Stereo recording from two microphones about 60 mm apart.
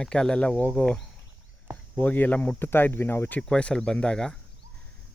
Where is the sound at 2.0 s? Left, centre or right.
Left.